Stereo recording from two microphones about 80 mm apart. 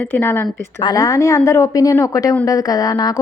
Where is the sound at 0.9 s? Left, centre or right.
Left.